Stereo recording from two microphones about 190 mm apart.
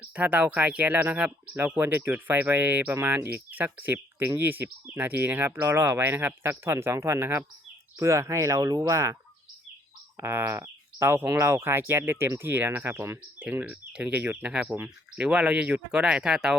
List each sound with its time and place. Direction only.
0.1 s speech: 10° right (ahead or behind)
10.2 s speech: 10° right (ahead or behind)